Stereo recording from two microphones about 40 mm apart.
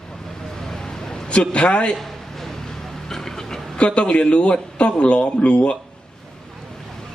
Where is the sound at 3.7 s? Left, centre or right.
Left.